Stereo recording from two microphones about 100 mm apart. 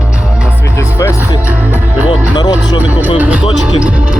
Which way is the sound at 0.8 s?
25° left (ahead or behind).